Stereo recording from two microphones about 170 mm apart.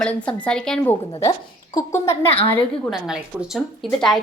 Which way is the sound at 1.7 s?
15° left (ahead or behind).